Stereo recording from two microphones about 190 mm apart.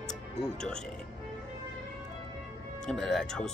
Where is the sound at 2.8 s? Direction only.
Centre (ahead or behind).